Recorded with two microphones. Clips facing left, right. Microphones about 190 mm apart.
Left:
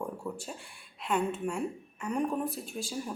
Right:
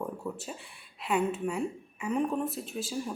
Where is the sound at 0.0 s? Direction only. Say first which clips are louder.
Right 1 dB; 5° right (ahead or behind).